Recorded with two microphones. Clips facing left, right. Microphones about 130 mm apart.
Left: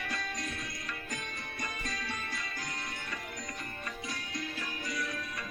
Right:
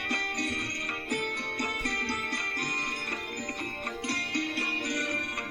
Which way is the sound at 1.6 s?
65° right (ahead or behind).